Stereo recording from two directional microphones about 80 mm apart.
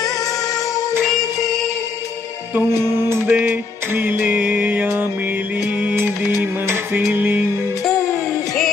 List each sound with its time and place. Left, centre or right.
2.9 s music: right
3.3 s music: centre
7.1 s music: right